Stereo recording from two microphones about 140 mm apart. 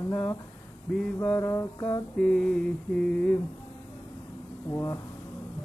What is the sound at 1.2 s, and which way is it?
Music, 20° left (ahead or behind).